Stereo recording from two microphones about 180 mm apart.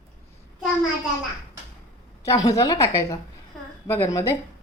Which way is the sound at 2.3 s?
20° left (ahead or behind).